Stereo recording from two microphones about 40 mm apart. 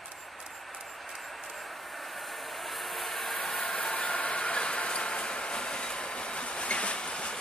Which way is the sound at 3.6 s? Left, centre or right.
Left.